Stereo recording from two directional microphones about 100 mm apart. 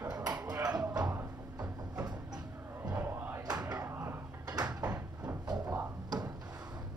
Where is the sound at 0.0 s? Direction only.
40° right (ahead or behind).